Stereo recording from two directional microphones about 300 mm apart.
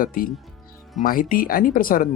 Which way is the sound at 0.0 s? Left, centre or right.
Left.